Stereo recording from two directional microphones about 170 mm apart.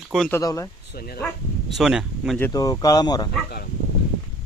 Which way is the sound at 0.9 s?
65° left (ahead or behind).